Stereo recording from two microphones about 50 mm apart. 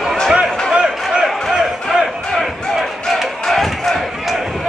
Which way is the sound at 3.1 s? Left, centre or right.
Centre.